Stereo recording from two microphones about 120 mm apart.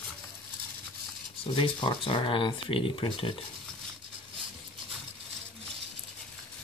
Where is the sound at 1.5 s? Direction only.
40° left (ahead or behind).